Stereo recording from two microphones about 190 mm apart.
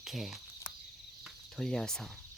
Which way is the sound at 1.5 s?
Centre (ahead or behind).